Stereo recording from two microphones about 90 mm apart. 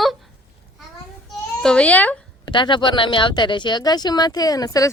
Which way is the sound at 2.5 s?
60° left (ahead or behind).